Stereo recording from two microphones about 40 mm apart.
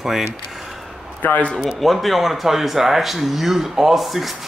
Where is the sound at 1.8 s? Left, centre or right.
Centre.